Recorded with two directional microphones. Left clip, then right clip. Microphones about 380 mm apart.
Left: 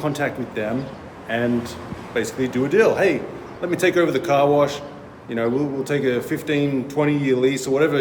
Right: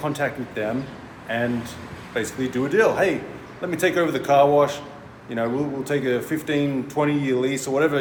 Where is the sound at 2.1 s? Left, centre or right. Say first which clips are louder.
Left 3 dB; centre.